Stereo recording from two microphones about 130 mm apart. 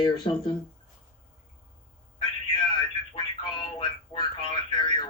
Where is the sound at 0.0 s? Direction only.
40° left (ahead or behind).